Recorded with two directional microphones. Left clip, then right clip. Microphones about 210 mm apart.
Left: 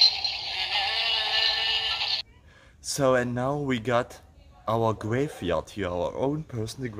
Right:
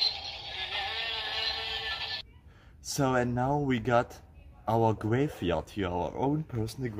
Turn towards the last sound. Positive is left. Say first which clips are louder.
# left 2 dB
turn(degrees=10)  # may be behind; listen again after turning